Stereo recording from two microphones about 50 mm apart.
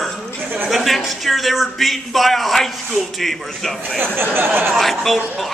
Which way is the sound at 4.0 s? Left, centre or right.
Right.